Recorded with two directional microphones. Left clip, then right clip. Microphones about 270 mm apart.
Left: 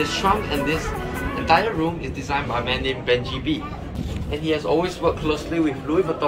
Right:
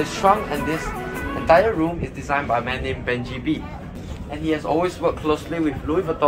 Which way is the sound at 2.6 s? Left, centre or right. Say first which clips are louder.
Left 2 dB; centre.